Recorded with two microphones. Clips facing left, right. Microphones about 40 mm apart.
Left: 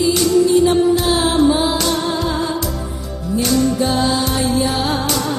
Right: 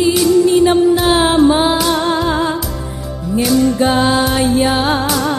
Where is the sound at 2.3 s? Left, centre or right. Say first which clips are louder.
Right 4 dB; right.